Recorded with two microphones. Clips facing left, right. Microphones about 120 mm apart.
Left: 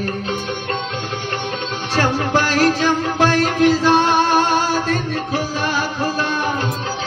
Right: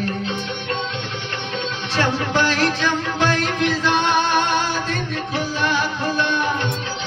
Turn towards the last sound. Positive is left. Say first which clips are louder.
# even
turn(degrees=40)  # may be behind; listen again after turning